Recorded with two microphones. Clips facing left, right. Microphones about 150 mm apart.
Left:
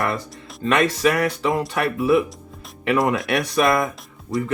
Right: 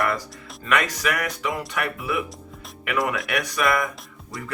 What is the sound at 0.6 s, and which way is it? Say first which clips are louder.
Speech: left 6 dB; 25° left (ahead or behind).